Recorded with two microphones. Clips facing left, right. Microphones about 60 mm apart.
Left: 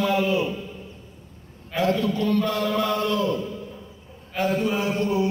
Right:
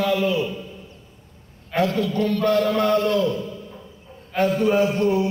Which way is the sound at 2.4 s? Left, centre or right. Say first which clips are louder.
Right 5 dB; right.